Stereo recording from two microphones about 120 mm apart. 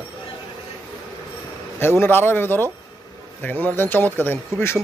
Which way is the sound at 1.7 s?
20° left (ahead or behind).